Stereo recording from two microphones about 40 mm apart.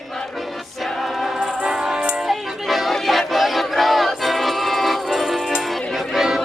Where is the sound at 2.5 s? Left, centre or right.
Centre.